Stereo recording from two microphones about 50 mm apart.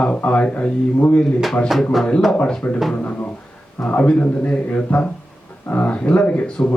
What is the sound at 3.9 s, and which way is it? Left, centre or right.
A man's voice, left.